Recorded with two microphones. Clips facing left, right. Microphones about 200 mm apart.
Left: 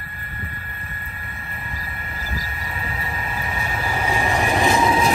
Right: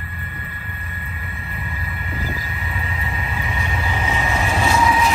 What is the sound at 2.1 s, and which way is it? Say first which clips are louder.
Vehicle: right 4 dB; 40° left (ahead or behind).